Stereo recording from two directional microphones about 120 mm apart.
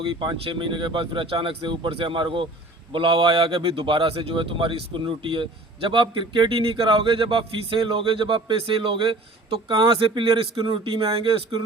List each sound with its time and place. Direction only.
0.0 s a man's voice: 45° right (ahead or behind)